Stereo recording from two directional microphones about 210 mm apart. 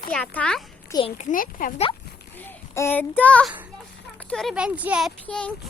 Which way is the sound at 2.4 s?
10° left (ahead or behind).